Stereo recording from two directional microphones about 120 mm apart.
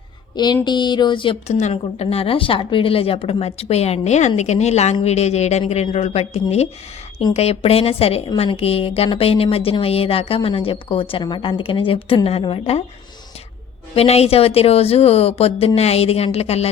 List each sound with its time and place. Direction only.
0.3 s speech: 35° left (ahead or behind)
1.5 s speech: 65° left (ahead or behind)
13.9 s speech: 60° left (ahead or behind)